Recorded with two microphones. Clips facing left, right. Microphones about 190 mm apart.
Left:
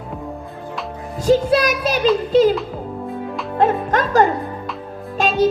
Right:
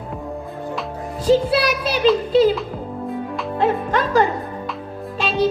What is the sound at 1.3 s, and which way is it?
Music, 45° left (ahead or behind).